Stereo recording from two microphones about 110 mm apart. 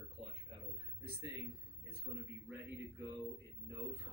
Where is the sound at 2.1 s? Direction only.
Centre (ahead or behind).